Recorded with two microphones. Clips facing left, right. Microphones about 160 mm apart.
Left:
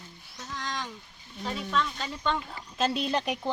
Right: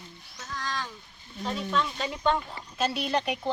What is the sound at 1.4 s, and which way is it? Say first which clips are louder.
Speech: right 1 dB; centre (ahead or behind).